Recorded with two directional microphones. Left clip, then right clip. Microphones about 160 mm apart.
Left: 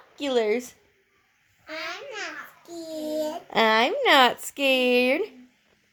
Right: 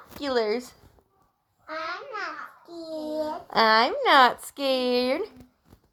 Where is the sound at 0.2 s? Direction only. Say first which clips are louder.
Left 2 dB; 25° left (ahead or behind).